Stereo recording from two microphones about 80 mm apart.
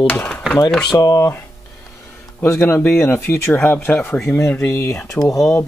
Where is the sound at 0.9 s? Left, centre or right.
Left.